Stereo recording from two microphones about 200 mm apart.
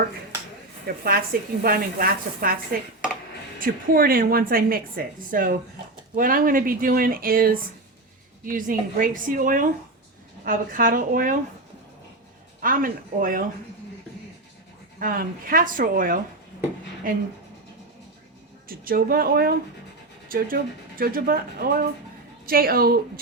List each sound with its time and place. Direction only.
1.0 s a woman's voice: 50° right (ahead or behind)
3.6 s a woman's voice: 45° right (ahead or behind)
12.6 s a woman's voice: 45° right (ahead or behind)
14.9 s a woman's voice: 45° right (ahead or behind)
18.7 s a woman's voice: 45° right (ahead or behind)